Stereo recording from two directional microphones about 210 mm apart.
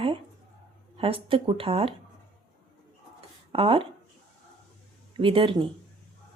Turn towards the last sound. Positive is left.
turn(degrees=-25)  # may be behind; listen again after turning